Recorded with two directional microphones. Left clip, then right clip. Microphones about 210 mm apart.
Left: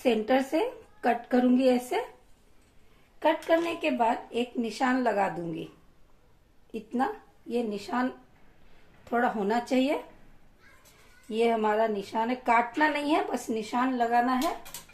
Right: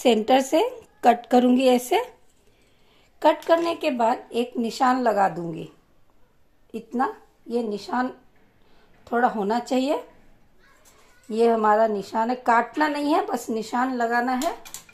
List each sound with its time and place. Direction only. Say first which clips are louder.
0.0 s a woman's voice: right 6 dB; 35° right (ahead or behind)
3.4 s a woman's voice: right 5 dB; 35° right (ahead or behind)
6.7 s a woman's voice: right 4 dB; 20° right (ahead or behind)
11.2 s a woman's voice: right 6 dB; 25° right (ahead or behind)